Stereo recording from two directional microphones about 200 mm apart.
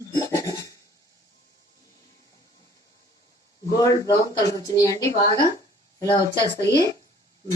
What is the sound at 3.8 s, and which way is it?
Speech, 20° left (ahead or behind).